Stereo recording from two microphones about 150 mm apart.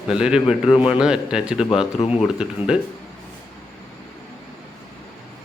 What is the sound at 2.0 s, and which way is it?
Speech, 40° left (ahead or behind).